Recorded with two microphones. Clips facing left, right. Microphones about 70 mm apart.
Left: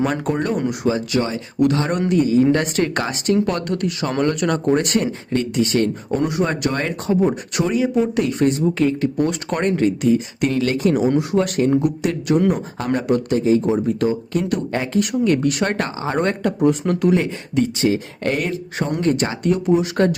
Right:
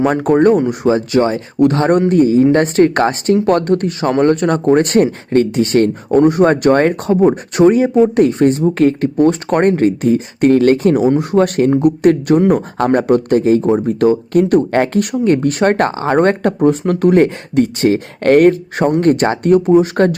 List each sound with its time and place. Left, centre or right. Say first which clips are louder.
0.0 s speech: right 9 dB; right
15.2 s speech: right 7 dB; right
16.0 s speech: right 8 dB; right